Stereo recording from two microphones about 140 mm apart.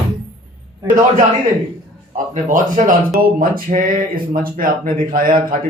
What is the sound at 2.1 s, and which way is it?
Speech, 70° right (ahead or behind).